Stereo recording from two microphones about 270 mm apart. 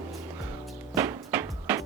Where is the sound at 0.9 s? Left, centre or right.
Centre.